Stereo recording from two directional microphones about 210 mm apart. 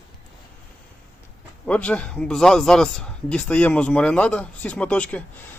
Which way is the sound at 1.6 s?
5° left (ahead or behind).